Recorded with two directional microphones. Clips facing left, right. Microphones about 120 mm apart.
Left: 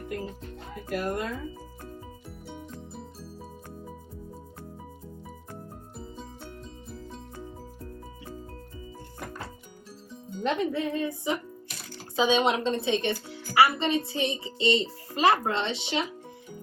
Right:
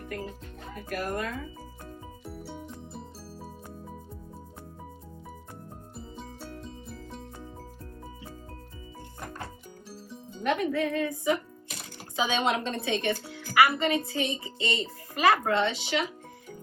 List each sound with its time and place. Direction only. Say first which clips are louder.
0.9 s a child's voice: left 2 dB; 25° left (ahead or behind)
2.2 s music: right 2 dB; centre (ahead or behind)
10.4 s a child's voice: even; 25° left (ahead or behind)